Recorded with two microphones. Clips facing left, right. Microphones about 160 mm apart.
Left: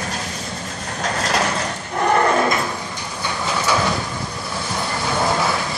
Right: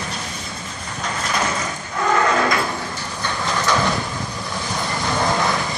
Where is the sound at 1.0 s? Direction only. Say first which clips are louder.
Left 3 dB; 80° left.